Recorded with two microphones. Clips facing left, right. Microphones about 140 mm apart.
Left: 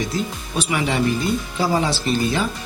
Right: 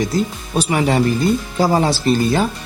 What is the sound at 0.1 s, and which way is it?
Speech, 40° right (ahead or behind).